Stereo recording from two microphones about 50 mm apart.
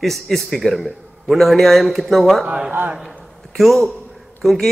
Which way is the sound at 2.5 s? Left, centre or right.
Right.